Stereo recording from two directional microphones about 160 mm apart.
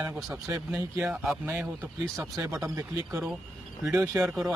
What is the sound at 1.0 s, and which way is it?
Speech, 5° right (ahead or behind).